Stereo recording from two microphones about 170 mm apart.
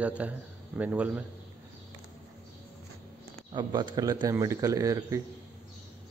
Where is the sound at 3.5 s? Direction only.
25° right (ahead or behind).